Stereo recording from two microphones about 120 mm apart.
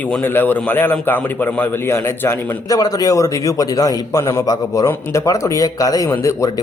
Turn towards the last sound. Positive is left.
turn(degrees=25)  # may be behind; listen again after turning